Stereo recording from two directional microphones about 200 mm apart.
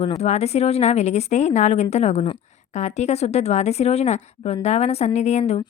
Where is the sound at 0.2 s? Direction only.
30° left (ahead or behind).